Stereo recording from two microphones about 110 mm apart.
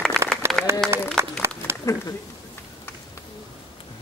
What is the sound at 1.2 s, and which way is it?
Applause, 25° right (ahead or behind).